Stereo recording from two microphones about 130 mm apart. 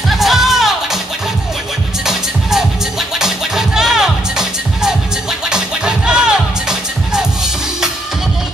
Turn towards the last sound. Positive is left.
turn(degrees=-5)  # may be behind; listen again after turning